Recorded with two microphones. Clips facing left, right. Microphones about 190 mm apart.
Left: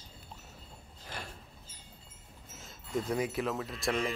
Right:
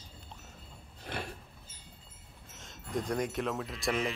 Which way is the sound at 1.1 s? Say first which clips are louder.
Right 5 dB; 65° right (ahead or behind).